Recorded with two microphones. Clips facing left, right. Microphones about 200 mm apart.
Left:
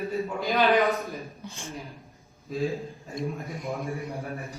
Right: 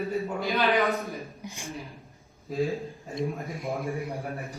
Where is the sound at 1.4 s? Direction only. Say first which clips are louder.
Even; 15° right (ahead or behind).